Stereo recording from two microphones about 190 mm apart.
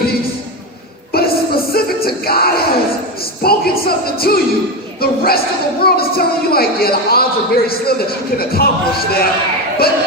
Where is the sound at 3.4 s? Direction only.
55° left (ahead or behind).